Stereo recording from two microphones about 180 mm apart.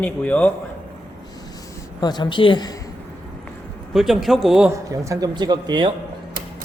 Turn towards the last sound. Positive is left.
turn(degrees=-25)  # may be behind; listen again after turning